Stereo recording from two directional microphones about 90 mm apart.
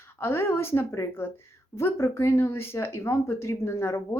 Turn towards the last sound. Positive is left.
turn(degrees=30)  # may be behind; listen again after turning